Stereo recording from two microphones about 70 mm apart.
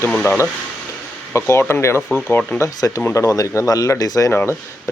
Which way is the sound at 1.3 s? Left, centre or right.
Left.